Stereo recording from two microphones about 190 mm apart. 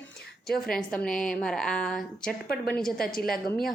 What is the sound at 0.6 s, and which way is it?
A woman's voice, 5° left (ahead or behind).